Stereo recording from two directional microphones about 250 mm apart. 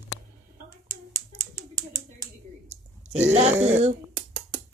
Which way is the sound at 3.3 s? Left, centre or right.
Right.